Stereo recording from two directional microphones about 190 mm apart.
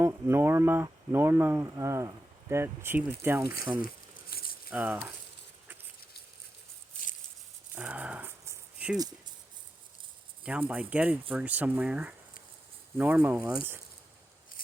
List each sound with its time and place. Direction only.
0.0 s speech: 10° right (ahead or behind)
4.3 s a sound: 55° left (ahead or behind)
4.7 s speech: 10° right (ahead or behind)
7.8 s rattle: 5° right (ahead or behind)
10.4 s speech: 5° right (ahead or behind)